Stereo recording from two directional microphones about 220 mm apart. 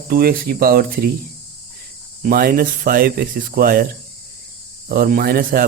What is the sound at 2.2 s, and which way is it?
Speech, 40° right (ahead or behind).